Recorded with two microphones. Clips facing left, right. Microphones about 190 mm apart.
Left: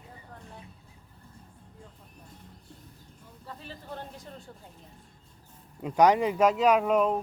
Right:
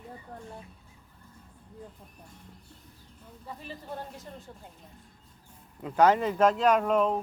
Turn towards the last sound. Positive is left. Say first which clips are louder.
# left 1 dB
turn(degrees=5)  # may be behind; listen again after turning